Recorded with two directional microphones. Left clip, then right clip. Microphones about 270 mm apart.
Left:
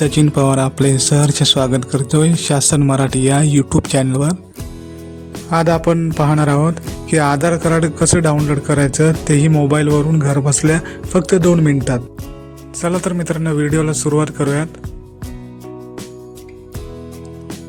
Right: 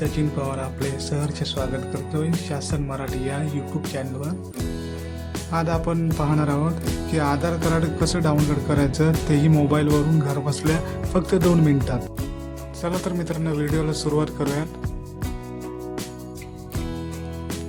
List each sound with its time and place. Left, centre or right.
0.0 s speech: left
5.5 s music: left
9.3 s speech: centre